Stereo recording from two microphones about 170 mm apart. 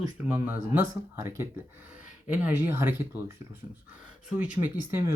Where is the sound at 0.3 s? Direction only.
10° right (ahead or behind).